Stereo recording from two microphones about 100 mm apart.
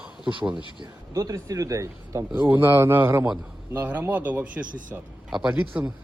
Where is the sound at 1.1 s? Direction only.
35° right (ahead or behind).